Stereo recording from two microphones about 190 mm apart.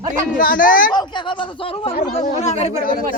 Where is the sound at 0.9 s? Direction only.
25° left (ahead or behind).